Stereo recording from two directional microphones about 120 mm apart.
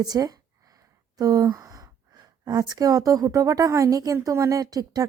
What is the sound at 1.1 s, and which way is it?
Sigh, 30° right (ahead or behind).